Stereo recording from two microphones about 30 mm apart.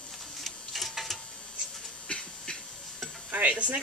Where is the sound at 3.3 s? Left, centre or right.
Right.